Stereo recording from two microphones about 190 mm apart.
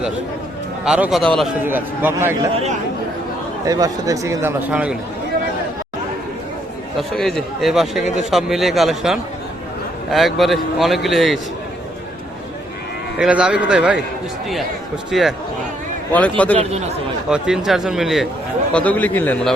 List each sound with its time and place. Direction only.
0.9 s a man's voice: 5° right (ahead or behind)
1.6 s speech: 10° right (ahead or behind)
3.7 s speech: 20° right (ahead or behind)
7.1 s a man's voice: centre (ahead or behind)
13.1 s a man's voice: 5° right (ahead or behind)
15.1 s a man's voice: centre (ahead or behind)
16.6 s speech: 35° right (ahead or behind)
17.2 s a man's voice: 5° right (ahead or behind)